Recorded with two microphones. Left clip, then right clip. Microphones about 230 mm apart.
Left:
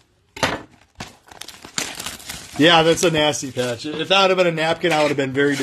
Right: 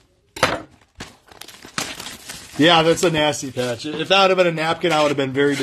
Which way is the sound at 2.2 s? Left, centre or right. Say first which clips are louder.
Left 2 dB; left.